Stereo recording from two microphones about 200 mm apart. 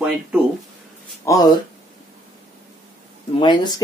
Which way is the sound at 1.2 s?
20° left (ahead or behind).